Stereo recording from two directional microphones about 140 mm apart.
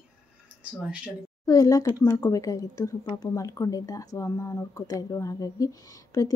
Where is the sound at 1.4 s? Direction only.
25° left (ahead or behind).